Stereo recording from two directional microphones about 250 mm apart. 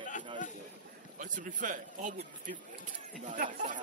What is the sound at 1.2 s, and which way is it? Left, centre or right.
Speech, right.